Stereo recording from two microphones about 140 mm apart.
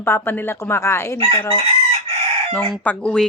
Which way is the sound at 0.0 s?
15° left (ahead or behind).